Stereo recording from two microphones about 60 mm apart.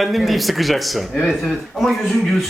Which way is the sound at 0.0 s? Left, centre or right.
Centre.